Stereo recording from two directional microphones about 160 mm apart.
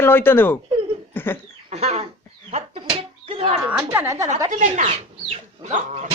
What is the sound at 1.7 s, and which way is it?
Chicken, 40° right (ahead or behind).